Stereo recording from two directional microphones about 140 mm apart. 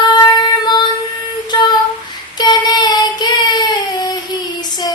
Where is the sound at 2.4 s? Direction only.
30° left (ahead or behind).